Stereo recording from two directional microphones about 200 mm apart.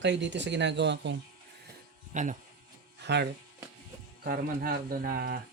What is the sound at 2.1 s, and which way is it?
Speech, 40° right (ahead or behind).